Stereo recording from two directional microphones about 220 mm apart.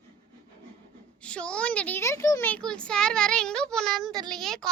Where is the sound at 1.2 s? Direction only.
5° left (ahead or behind).